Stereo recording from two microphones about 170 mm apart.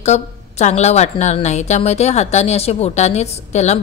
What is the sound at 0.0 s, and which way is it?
A woman's voice, 40° left (ahead or behind).